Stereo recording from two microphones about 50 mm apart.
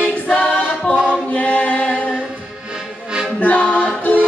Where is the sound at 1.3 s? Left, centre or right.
Left.